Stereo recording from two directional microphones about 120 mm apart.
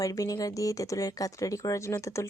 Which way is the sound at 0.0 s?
30° left (ahead or behind).